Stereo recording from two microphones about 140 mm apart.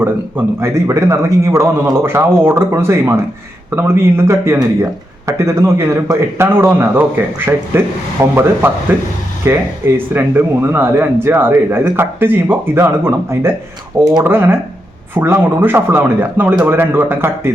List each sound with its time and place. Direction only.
0.0 s speech: 15° right (ahead or behind)